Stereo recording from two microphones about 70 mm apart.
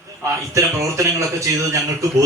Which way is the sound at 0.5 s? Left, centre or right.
Right.